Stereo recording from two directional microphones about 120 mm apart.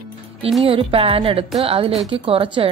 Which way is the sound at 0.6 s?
50° right (ahead or behind).